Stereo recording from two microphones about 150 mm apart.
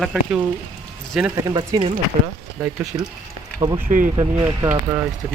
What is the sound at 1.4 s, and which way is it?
Speech, 25° right (ahead or behind).